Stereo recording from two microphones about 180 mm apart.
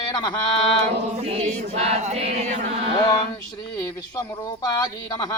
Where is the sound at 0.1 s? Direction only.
25° left (ahead or behind).